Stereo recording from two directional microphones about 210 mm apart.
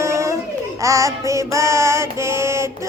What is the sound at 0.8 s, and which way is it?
Child singing, 15° right (ahead or behind).